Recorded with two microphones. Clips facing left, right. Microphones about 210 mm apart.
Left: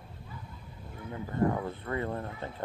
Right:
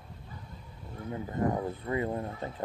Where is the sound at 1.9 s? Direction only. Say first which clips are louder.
Right 3 dB; 15° right (ahead or behind).